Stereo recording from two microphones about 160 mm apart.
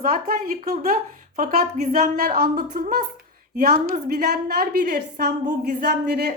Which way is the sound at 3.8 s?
70° right (ahead or behind).